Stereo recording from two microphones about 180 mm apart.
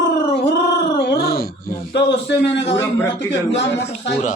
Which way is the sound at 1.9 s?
70° left (ahead or behind).